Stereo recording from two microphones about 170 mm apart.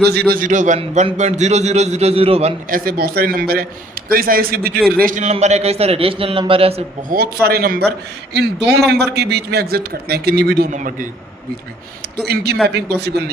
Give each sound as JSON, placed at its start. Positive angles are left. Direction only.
{"t": 0.0, "sound": "a man's voice", "side_deg": -70}
{"t": 2.6, "sound": "speech", "side_deg": -60}
{"t": 4.9, "sound": "a man's voice", "side_deg": -50}
{"t": 7.4, "sound": "a man's voice", "side_deg": -65}
{"t": 12.2, "sound": "a man's voice", "side_deg": -70}